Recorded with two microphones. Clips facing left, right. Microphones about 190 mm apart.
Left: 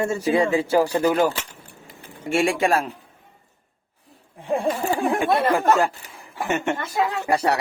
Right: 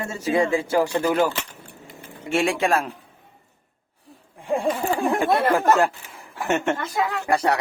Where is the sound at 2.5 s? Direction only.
45° left (ahead or behind).